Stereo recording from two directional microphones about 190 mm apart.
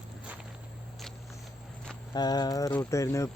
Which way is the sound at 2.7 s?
15° left (ahead or behind).